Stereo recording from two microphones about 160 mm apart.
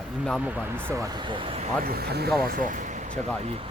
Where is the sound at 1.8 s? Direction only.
75° right (ahead or behind).